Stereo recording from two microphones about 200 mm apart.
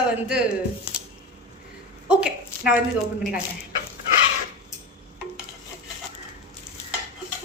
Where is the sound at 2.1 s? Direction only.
5° right (ahead or behind).